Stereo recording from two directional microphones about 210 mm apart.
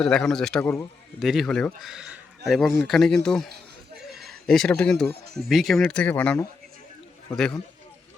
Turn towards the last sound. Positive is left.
turn(degrees=5)  # may be behind; listen again after turning